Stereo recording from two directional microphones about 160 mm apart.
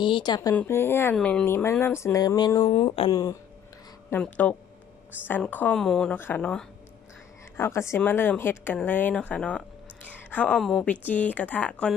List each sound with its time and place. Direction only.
0.0 s speech: 30° left (ahead or behind)
2.7 s speech: 35° left (ahead or behind)
3.1 s speech: 25° left (ahead or behind)
4.1 s speech: 10° left (ahead or behind)